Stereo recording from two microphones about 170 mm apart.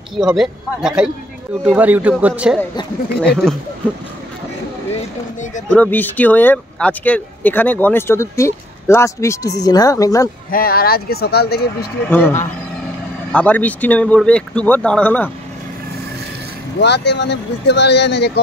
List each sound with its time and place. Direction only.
0.1 s speech: centre (ahead or behind)
3.2 s speech: 5° left (ahead or behind)
5.7 s speech: 10° left (ahead or behind)
10.5 s speech: 60° left (ahead or behind)
12.1 s speech: 10° left (ahead or behind)
16.8 s speech: 90° left